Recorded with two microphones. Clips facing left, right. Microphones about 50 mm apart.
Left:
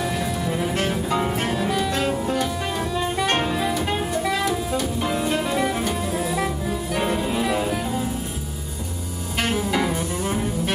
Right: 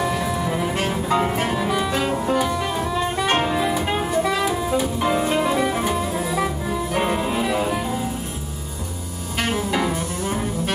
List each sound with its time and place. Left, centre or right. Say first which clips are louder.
0.0 s music: right 2 dB; centre
3.5 s jazz: right 2 dB; centre
6.9 s music: right 1 dB; centre
9.4 s music: even; centre